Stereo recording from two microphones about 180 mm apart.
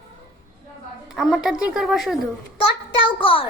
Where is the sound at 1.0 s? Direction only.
Centre (ahead or behind).